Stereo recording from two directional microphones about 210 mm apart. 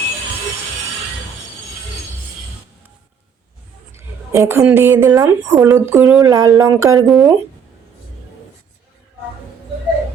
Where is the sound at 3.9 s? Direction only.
15° right (ahead or behind).